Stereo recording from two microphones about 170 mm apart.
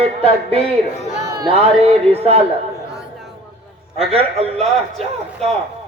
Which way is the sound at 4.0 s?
35° right (ahead or behind).